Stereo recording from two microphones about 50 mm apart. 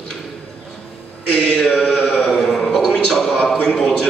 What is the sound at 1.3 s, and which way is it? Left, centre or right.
Mantra, centre.